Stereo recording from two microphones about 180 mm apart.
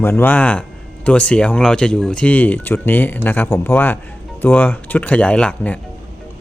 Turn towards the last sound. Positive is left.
turn(degrees=5)  # may be behind; listen again after turning